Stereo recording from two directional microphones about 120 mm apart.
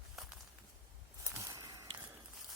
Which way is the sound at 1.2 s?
25° right (ahead or behind).